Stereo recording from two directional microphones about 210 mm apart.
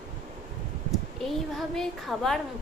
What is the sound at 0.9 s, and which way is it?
Speech, centre (ahead or behind).